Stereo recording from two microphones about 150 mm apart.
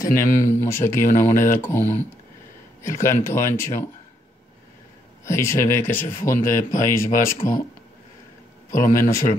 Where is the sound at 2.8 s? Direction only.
20° left (ahead or behind).